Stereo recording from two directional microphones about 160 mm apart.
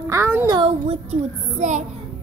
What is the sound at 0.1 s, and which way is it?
Speech, 15° right (ahead or behind).